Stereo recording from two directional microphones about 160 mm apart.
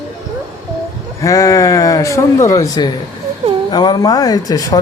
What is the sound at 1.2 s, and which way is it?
A man's voice, 20° left (ahead or behind).